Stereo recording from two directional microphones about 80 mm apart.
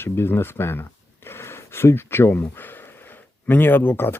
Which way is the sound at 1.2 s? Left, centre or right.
Left.